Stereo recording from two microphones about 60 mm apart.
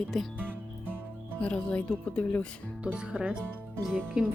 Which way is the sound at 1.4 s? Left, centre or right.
Left.